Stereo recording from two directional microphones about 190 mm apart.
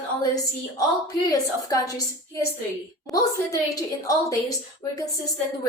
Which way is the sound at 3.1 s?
20° left (ahead or behind).